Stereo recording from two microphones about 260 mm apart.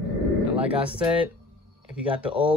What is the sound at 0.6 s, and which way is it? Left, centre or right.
Speech, centre.